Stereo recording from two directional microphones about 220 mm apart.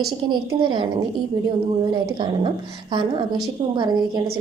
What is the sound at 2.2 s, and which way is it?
A woman's voice, 20° right (ahead or behind).